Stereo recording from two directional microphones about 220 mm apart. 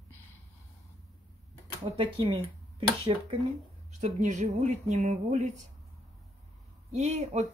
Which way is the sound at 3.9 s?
35° right (ahead or behind).